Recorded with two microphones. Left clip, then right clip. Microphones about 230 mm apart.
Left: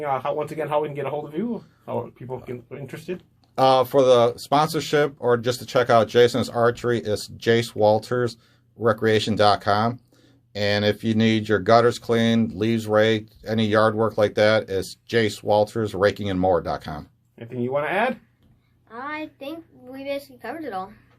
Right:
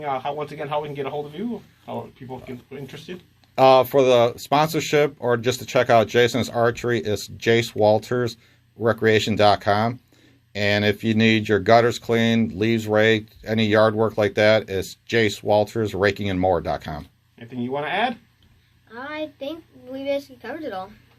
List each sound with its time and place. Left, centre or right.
0.0 s speech: left
3.5 s speech: right
17.3 s speech: left
18.9 s a woman's voice: centre